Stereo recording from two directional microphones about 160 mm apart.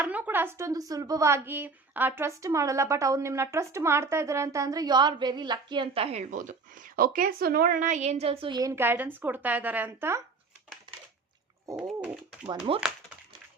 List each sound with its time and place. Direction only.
0.0 s speech: 10° right (ahead or behind)
11.8 s pigeon: 5° right (ahead or behind)
12.5 s speech: 35° right (ahead or behind)